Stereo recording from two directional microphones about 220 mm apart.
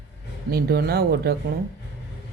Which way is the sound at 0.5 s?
45° right (ahead or behind).